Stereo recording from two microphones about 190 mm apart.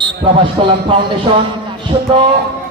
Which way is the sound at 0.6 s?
30° right (ahead or behind).